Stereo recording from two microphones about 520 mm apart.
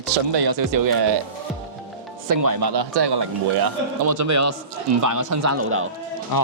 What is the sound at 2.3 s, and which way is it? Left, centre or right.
Speech, right.